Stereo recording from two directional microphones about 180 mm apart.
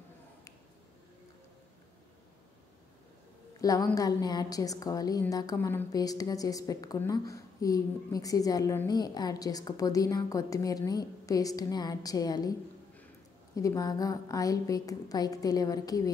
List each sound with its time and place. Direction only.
3.6 s a woman's voice: 20° left (ahead or behind)
13.6 s a woman's voice: 20° left (ahead or behind)